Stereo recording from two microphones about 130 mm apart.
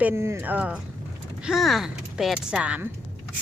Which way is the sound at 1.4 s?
Centre (ahead or behind).